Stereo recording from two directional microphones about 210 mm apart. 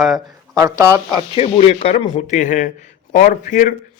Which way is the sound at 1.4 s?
30° left (ahead or behind).